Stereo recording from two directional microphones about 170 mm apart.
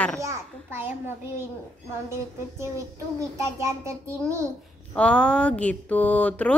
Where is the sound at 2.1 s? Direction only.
15° right (ahead or behind).